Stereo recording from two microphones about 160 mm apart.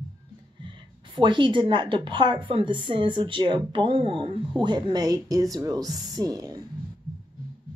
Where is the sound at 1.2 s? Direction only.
30° right (ahead or behind).